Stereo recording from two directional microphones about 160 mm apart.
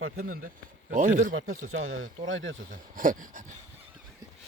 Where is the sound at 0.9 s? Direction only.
50° right (ahead or behind).